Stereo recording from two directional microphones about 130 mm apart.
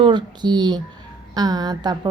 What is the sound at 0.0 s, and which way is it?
A woman's voice, 35° right (ahead or behind).